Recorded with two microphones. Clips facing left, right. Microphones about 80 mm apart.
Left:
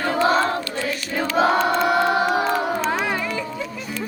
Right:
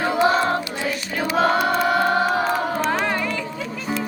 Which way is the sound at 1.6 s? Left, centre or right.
Centre.